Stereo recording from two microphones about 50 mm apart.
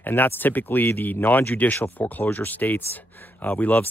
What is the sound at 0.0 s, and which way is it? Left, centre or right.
Speech, left.